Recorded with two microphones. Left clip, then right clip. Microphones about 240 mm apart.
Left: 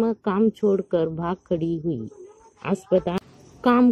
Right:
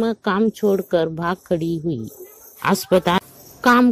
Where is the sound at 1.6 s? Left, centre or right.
Right.